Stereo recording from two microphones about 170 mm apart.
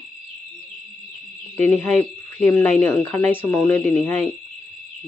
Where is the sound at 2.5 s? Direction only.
10° left (ahead or behind).